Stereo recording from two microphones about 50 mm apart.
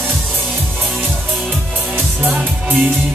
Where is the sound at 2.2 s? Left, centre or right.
Right.